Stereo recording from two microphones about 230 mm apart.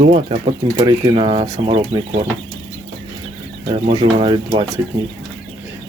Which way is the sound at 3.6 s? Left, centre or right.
Right.